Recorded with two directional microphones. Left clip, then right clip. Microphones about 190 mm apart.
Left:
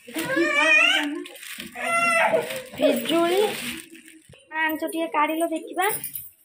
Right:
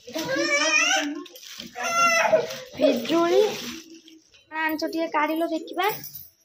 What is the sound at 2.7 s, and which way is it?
Speech, 5° right (ahead or behind).